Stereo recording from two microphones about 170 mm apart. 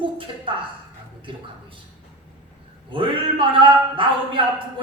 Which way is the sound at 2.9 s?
30° right (ahead or behind).